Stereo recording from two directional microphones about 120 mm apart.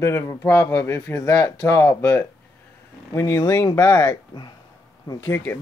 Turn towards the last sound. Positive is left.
turn(degrees=15)  # may be behind; listen again after turning